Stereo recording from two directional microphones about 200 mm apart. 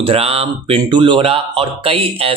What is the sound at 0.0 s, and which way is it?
Speech, 30° right (ahead or behind).